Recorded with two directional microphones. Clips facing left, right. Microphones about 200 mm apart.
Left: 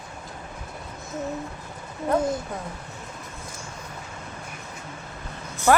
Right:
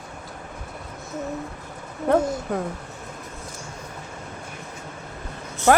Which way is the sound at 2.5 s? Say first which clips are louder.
Right 8 dB; 60° right (ahead or behind).